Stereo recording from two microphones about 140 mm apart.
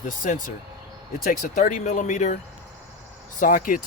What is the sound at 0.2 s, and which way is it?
Speech, 75° left (ahead or behind).